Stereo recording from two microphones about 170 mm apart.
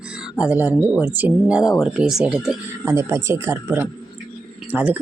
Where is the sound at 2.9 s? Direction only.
15° right (ahead or behind).